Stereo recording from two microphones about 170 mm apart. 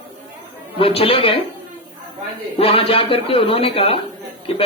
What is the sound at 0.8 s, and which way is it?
Speech, 35° left (ahead or behind).